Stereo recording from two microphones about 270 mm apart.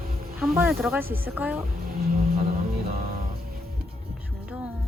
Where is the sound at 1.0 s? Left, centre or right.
Right.